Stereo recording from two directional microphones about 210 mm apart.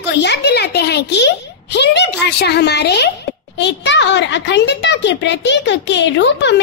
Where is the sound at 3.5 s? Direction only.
55° left (ahead or behind).